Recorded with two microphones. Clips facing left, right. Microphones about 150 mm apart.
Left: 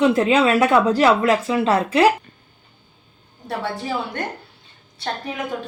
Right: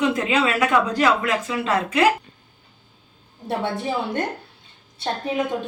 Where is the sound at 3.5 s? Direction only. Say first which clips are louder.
Right 1 dB; 25° right (ahead or behind).